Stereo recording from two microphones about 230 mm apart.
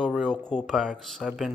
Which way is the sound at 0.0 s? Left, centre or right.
Centre.